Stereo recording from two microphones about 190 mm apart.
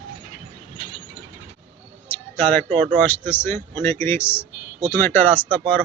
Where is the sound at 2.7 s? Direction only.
10° left (ahead or behind).